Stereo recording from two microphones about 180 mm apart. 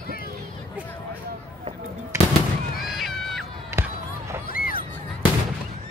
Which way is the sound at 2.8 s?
Centre (ahead or behind).